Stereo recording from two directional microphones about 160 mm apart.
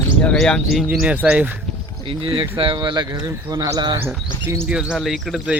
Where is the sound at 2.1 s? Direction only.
35° right (ahead or behind).